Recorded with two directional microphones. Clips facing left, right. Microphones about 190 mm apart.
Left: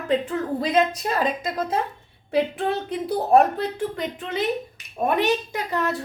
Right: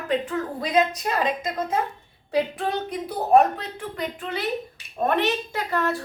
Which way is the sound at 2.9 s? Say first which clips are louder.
Even; 30° left (ahead or behind).